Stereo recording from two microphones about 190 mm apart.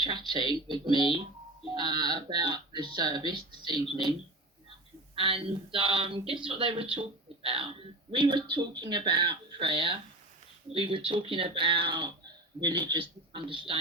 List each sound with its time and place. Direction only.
0.0 s speech: 25° right (ahead or behind)
5.1 s speech: 25° right (ahead or behind)